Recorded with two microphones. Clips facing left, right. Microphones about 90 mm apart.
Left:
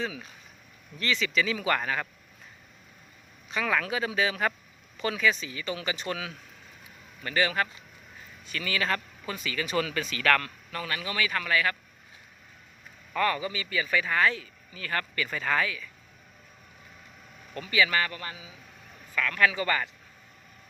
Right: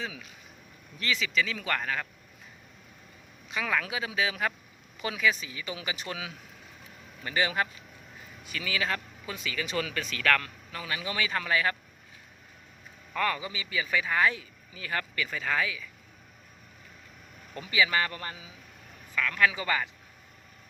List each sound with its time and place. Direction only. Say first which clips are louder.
0.9 s a man's voice: left 2 dB; 5° right (ahead or behind)
3.5 s a man's voice: left 2 dB; centre (ahead or behind); by 11.8 s 25° right (ahead or behind)
13.1 s a man's voice: left 2 dB; centre (ahead or behind)
13.4 s speech: left 3 dB; 15° right (ahead or behind)
17.5 s speech: left 1 dB; 15° right (ahead or behind)
18.1 s a man's voice: even; 35° right (ahead or behind)
19.1 s speech: left 1 dB; 10° right (ahead or behind)